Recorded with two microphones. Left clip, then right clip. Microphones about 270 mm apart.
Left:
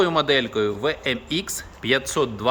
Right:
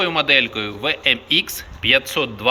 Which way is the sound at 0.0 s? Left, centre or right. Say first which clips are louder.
Right 3 dB; left.